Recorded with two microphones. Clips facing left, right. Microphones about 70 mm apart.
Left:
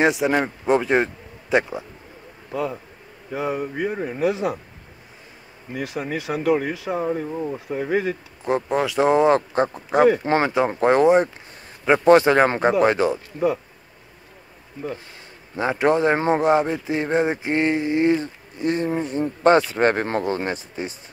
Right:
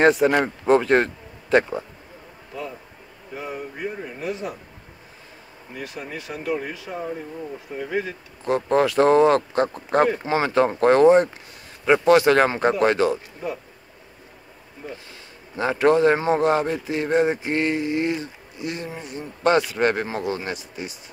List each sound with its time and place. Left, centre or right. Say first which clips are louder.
0.0 s speech: right 2 dB; centre
3.3 s speech: left 7 dB; left
5.7 s speech: left 6 dB; left
7.7 s speech: left 4 dB; left
8.5 s a man's voice: even; left
8.7 s speech: right 3 dB; centre
9.1 s a man's voice: right 1 dB; left
15.5 s a man's voice: right 1 dB; left